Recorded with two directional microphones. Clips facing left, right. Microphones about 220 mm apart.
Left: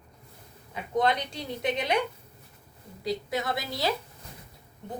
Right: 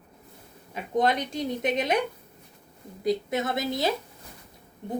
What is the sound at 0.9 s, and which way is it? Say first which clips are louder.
A woman's voice: right 2 dB; 20° right (ahead or behind).